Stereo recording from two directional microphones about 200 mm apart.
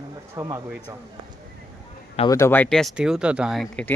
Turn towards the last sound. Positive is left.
turn(degrees=5)  # may be behind; listen again after turning